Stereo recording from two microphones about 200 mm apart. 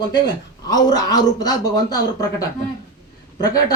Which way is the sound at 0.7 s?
20° left (ahead or behind).